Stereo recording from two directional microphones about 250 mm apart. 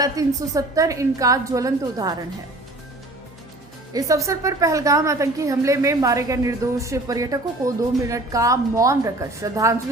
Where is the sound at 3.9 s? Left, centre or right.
Centre.